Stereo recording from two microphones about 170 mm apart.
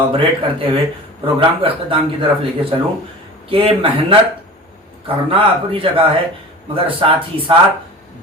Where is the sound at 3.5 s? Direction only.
30° right (ahead or behind).